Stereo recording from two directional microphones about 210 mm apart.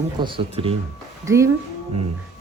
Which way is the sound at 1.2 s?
15° right (ahead or behind).